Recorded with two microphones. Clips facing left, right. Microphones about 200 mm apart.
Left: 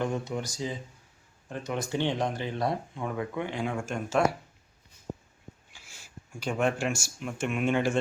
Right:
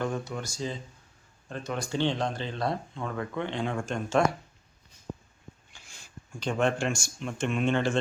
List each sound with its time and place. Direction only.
0.0 s speech: 20° left (ahead or behind)
5.7 s speech: 5° left (ahead or behind)